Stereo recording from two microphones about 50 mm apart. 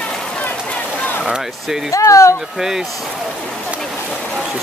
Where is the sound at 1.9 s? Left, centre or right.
Left.